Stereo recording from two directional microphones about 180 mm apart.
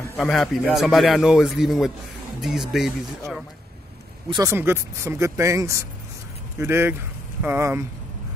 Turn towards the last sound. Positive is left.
turn(degrees=-15)  # may be behind; listen again after turning